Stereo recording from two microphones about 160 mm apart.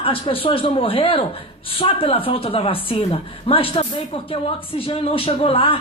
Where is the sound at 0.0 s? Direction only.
35° left (ahead or behind).